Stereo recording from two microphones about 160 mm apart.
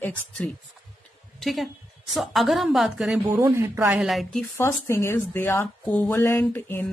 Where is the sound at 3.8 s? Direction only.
5° right (ahead or behind).